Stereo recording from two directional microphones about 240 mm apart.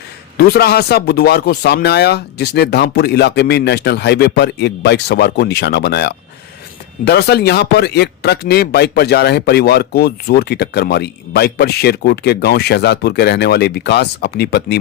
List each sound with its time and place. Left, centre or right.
0.3 s speech: left